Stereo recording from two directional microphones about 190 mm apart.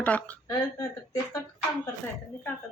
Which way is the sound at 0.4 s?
20° left (ahead or behind).